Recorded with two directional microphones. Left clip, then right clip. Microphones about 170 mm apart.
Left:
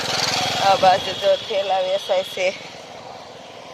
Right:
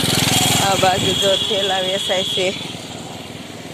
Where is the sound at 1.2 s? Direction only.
25° left (ahead or behind).